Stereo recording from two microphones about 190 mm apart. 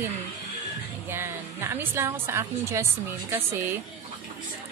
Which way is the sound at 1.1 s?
10° right (ahead or behind).